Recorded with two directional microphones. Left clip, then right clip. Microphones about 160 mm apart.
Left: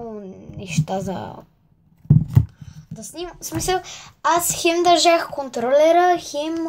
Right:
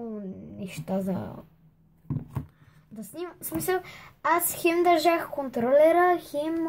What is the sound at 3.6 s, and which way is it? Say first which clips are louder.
Speech: left 6 dB; 25° right (ahead or behind).